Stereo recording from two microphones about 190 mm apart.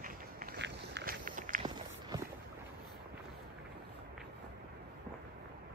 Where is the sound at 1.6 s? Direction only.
20° right (ahead or behind).